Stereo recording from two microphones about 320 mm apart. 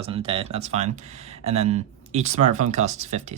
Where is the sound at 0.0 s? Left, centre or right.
Centre.